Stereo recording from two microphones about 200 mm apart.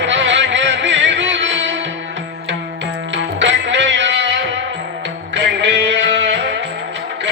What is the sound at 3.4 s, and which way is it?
Music, 65° right (ahead or behind).